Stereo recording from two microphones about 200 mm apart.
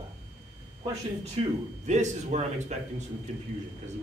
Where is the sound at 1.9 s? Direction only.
35° right (ahead or behind).